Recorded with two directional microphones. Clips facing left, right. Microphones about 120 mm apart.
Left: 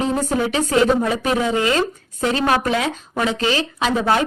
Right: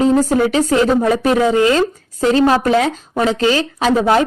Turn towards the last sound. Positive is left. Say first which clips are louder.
# right 5 dB
turn(degrees=-40)  # may be behind; listen again after turning